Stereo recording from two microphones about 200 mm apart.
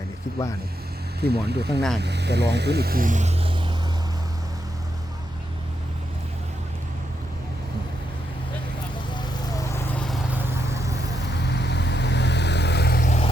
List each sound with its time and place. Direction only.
1.2 s speech: 55° right (ahead or behind); by 3.5 s 35° right (ahead or behind)
9.1 s vehicle: 15° left (ahead or behind)
10.4 s vehicle: 15° right (ahead or behind)
11.3 s vehicle: 55° left (ahead or behind)